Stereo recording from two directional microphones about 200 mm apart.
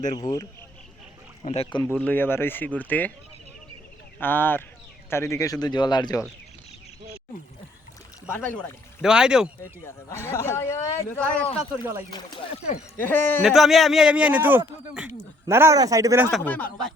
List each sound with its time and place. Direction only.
0.2 s speech: 20° left (ahead or behind)
1.5 s speech: 30° left (ahead or behind)
1.8 s a man's voice: 10° left (ahead or behind)
4.2 s a man's voice: 10° left (ahead or behind)
8.3 s a man's voice: 10° left (ahead or behind)
9.0 s a man's voice: 5° right (ahead or behind)
9.8 s a man's voice: 15° left (ahead or behind)
11.4 s speech: 30° left (ahead or behind)
13.0 s a man's voice: 10° left (ahead or behind)
13.5 s a man's voice: centre (ahead or behind); by 16.3 s 15° right (ahead or behind)
16.4 s a man's voice: 10° left (ahead or behind)